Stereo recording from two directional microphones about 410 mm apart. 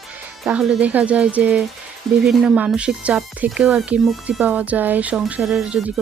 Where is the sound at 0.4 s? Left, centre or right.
Centre.